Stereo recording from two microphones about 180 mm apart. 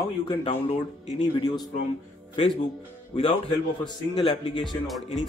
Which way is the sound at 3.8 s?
25° left (ahead or behind).